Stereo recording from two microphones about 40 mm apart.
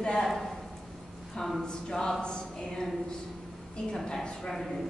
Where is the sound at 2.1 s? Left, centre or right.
Left.